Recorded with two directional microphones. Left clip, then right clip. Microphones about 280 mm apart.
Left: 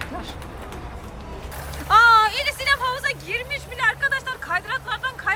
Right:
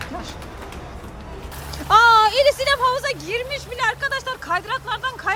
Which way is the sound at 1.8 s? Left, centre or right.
Centre.